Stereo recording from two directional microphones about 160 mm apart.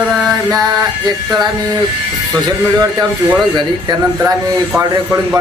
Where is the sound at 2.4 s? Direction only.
25° right (ahead or behind).